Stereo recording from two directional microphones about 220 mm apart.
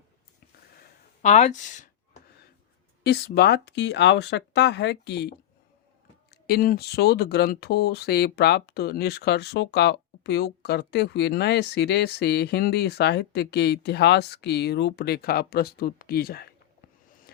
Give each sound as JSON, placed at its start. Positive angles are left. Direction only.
{"t": 1.2, "sound": "speech", "side_deg": 30}
{"t": 3.0, "sound": "speech", "side_deg": 45}
{"t": 6.3, "sound": "speech", "side_deg": 45}
{"t": 17.1, "sound": "a sound", "side_deg": 40}